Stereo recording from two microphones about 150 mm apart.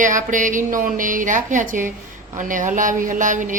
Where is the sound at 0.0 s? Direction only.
60° right (ahead or behind).